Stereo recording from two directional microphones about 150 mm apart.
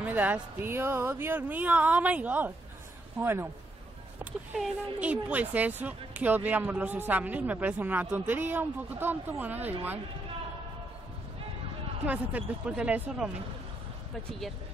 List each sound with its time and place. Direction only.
0.0 s speech: 10° right (ahead or behind)
12.1 s speech: 10° right (ahead or behind)